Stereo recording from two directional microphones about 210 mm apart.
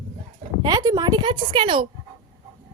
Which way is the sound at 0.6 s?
20° right (ahead or behind).